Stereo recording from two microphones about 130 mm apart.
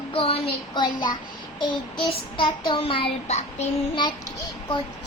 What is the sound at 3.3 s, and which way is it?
Child singing, 60° left (ahead or behind).